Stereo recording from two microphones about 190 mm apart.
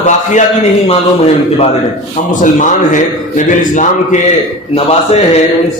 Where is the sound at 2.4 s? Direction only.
40° left (ahead or behind).